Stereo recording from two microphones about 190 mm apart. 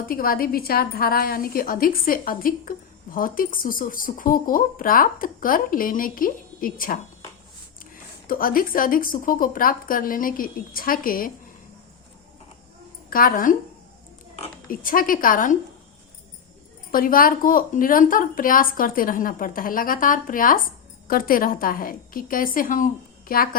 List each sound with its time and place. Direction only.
0.1 s a woman's voice: 50° left (ahead or behind)
8.3 s a woman's voice: 50° left (ahead or behind)
13.1 s a woman's voice: 50° left (ahead or behind)
14.7 s a woman's voice: 45° left (ahead or behind)
16.9 s a woman's voice: 50° left (ahead or behind)